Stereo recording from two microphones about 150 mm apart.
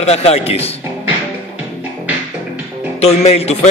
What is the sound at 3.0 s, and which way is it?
Speech, 45° left (ahead or behind).